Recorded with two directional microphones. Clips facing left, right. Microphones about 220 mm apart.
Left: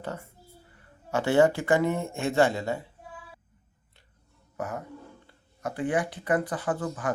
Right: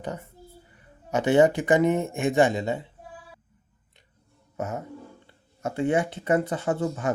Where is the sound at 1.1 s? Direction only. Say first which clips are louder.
Right 2 dB; 20° right (ahead or behind).